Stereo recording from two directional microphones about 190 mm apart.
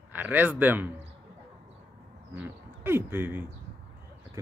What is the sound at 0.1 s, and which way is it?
Speech, 10° right (ahead or behind).